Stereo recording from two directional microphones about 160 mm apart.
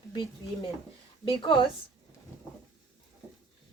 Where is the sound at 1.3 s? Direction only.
30° left (ahead or behind).